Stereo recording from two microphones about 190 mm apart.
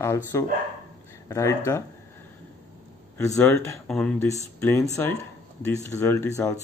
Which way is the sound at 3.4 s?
10° left (ahead or behind).